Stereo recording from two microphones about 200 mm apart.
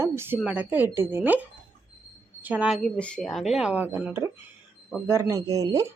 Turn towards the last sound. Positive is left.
turn(degrees=-15)  # may be behind; listen again after turning